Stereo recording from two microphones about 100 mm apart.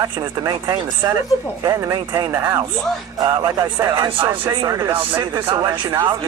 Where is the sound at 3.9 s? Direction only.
40° right (ahead or behind).